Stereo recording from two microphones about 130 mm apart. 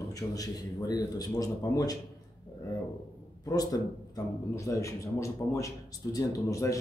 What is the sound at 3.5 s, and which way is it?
A man's voice, 30° left (ahead or behind).